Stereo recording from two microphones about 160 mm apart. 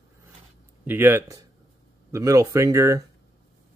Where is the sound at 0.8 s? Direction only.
15° right (ahead or behind).